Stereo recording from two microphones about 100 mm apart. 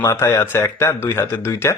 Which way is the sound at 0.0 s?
30° left (ahead or behind).